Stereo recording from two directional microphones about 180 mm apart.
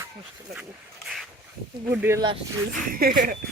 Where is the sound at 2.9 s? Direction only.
50° right (ahead or behind).